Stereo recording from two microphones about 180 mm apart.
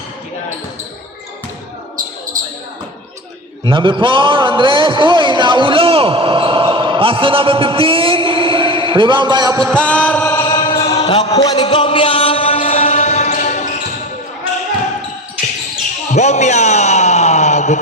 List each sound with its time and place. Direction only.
3.6 s a man's voice: 25° right (ahead or behind)
9.7 s chant: 5° left (ahead or behind); by 11.2 s 20° left (ahead or behind)
11.4 s music: 25° left (ahead or behind); by 13.7 s 40° left (ahead or behind)
16.1 s a sound: 40° left (ahead or behind)